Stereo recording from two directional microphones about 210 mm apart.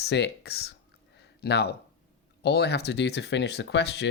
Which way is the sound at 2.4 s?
50° left (ahead or behind).